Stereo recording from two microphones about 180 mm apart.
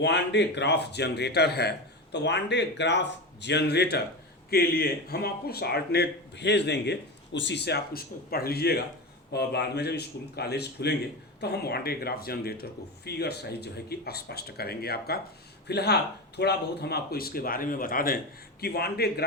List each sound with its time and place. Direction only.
0.0 s a man's voice: 75° left (ahead or behind)
2.1 s a man's voice: 75° left (ahead or behind)